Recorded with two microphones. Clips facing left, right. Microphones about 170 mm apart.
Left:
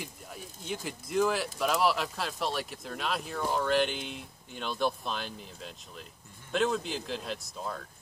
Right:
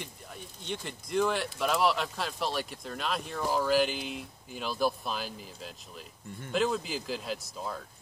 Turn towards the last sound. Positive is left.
turn(degrees=0)  # may be behind; listen again after turning